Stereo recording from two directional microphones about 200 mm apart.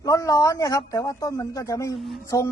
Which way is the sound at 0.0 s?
15° left (ahead or behind).